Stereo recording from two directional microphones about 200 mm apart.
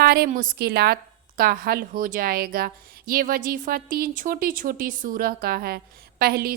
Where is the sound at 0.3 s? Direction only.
45° right (ahead or behind).